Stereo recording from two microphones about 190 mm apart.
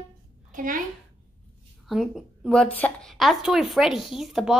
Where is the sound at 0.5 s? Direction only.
45° right (ahead or behind).